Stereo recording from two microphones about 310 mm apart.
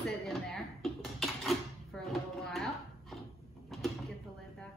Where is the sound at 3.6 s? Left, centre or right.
Centre.